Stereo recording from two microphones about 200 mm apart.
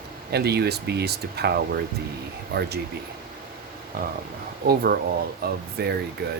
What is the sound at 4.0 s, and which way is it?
Speech, 45° right (ahead or behind).